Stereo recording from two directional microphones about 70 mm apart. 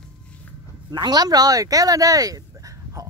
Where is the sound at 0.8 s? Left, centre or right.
Right.